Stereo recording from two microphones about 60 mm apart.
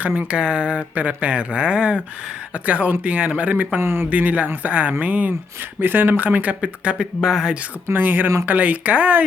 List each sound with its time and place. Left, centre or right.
0.2 s speech: centre
3.8 s speech: right
4.1 s speech: right
7.2 s speech: centre
7.9 s speech: right